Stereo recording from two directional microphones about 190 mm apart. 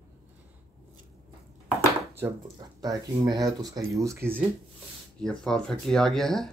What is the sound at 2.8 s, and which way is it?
Speech, 20° right (ahead or behind).